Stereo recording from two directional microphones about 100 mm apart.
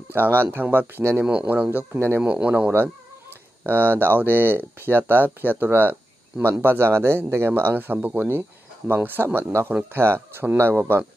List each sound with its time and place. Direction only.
0.1 s speech: 20° right (ahead or behind)